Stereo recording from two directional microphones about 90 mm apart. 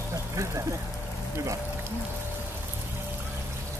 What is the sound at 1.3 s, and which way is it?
Speech, 30° right (ahead or behind).